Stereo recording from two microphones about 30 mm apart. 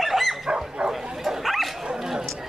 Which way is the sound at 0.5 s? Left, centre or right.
Right.